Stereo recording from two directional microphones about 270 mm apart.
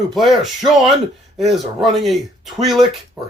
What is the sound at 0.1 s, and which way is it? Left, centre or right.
Speech, centre.